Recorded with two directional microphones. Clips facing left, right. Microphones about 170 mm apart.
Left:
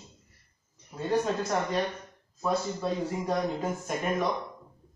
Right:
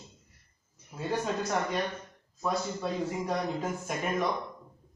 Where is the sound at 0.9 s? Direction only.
Centre (ahead or behind).